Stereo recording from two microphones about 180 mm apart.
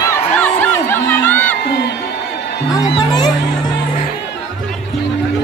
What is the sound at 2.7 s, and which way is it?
Music, 20° left (ahead or behind).